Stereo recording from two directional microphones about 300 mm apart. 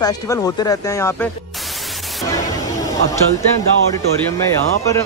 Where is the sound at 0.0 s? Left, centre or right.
Centre.